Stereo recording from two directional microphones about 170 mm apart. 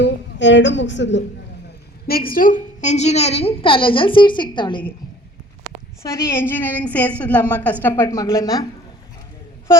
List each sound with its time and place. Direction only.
0.0 s a woman's voice: 90° left
2.0 s a woman's voice: 60° left (ahead or behind); by 4.8 s 25° left (ahead or behind)
6.3 s a woman's voice: 10° left (ahead or behind)